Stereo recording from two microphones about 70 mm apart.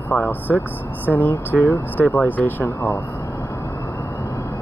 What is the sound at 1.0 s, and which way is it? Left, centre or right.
Speech, left.